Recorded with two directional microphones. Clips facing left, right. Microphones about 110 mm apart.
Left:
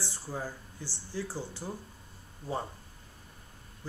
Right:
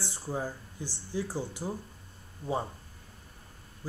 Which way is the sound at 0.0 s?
15° right (ahead or behind).